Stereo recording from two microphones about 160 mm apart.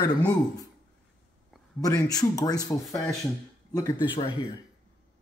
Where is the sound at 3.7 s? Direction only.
25° left (ahead or behind).